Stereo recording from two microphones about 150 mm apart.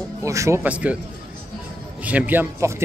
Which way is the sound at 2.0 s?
10° right (ahead or behind).